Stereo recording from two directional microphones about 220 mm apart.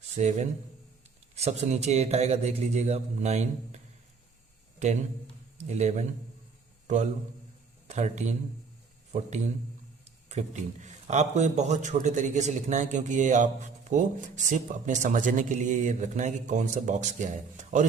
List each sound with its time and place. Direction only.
0.2 s speech: 30° right (ahead or behind)
5.6 s a man's voice: 30° right (ahead or behind)
10.2 s speech: 30° right (ahead or behind)